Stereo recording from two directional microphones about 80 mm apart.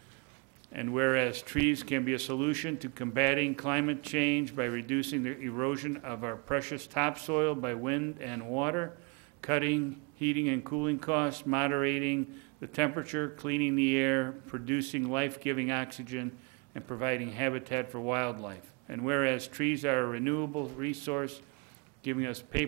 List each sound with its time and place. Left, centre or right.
0.7 s speech: left